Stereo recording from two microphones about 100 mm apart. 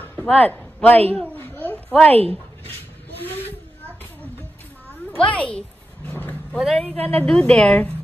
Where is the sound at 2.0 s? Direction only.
80° right.